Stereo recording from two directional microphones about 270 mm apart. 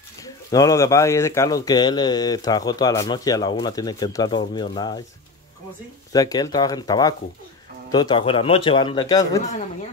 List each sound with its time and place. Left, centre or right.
0.2 s speech: centre
6.1 s speech: centre